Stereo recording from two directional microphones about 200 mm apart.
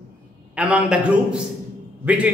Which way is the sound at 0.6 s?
5° right (ahead or behind).